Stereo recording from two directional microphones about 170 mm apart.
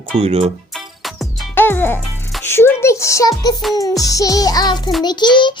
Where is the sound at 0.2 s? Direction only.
35° right (ahead or behind).